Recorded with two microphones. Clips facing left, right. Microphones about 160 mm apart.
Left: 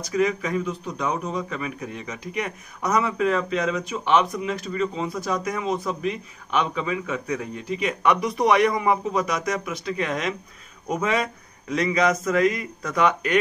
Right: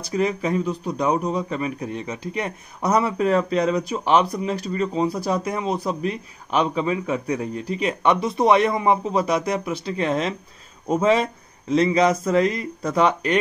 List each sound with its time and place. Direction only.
0.0 s a man's voice: 30° right (ahead or behind)